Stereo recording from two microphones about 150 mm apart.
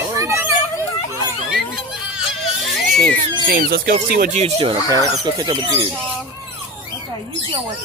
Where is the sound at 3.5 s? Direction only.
75° right (ahead or behind).